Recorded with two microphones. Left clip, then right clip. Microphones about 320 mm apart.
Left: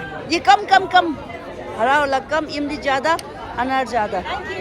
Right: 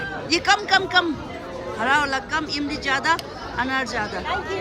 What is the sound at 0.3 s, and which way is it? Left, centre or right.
Speech, centre.